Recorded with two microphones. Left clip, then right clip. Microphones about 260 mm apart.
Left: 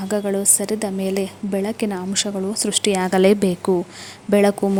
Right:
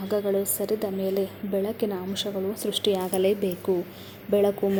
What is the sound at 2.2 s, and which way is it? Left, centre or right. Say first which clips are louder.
Speech: left 4 dB; left.